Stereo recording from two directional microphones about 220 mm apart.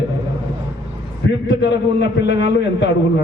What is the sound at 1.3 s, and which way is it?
A man's voice, 55° left (ahead or behind).